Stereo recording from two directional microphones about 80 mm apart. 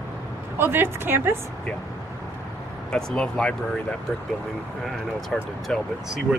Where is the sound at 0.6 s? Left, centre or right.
Right.